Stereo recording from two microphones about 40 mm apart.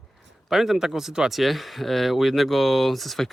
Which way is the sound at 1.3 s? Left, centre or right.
Centre.